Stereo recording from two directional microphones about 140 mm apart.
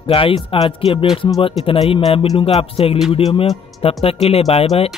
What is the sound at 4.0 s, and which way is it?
Speech, 45° left (ahead or behind).